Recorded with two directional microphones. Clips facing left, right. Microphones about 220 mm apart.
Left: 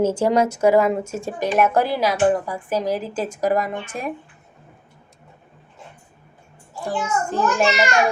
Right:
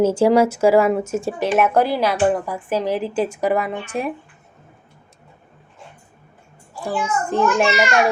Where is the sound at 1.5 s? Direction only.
50° right (ahead or behind).